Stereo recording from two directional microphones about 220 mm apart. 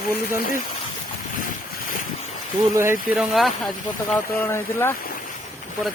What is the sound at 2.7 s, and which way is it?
Speech, 10° right (ahead or behind).